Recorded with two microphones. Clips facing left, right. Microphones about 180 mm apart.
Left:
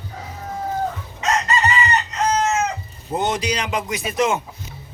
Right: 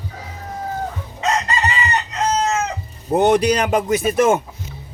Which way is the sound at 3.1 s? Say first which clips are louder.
Right 8 dB; 65° right (ahead or behind).